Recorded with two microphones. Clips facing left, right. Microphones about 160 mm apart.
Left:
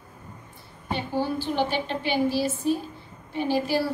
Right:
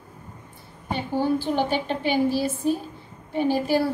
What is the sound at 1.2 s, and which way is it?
A woman's voice, 50° right (ahead or behind).